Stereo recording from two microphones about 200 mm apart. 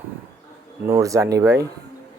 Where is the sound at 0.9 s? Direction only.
15° right (ahead or behind).